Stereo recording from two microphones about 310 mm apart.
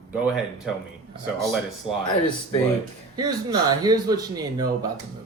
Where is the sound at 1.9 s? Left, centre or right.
Centre.